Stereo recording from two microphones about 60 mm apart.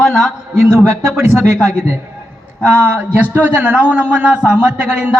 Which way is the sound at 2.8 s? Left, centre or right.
Right.